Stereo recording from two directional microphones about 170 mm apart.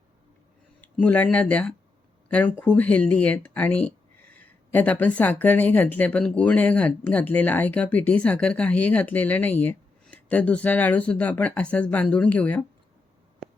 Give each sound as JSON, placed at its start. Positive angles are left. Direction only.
{"t": 0.8, "sound": "speech", "side_deg": 10}